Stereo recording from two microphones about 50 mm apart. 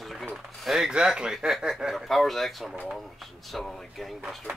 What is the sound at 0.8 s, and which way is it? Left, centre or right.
Speech, centre.